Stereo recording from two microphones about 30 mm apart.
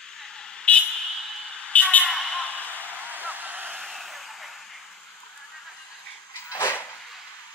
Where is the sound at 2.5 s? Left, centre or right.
Right.